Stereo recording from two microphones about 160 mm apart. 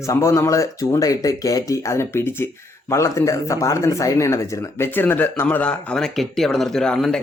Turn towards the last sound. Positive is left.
turn(degrees=5)  # may be behind; listen again after turning